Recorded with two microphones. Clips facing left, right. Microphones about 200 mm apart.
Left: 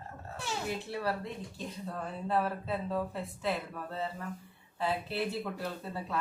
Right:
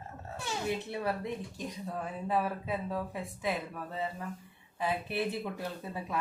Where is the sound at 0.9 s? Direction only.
20° right (ahead or behind).